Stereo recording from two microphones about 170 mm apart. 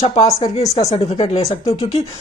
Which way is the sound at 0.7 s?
35° left (ahead or behind).